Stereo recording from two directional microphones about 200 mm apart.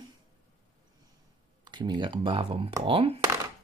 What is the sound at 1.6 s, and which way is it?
Speech, 20° right (ahead or behind).